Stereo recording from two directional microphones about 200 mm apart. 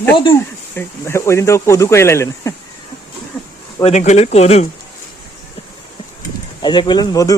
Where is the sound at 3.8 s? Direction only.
35° left (ahead or behind).